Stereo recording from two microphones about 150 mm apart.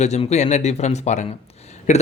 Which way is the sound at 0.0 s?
50° left (ahead or behind).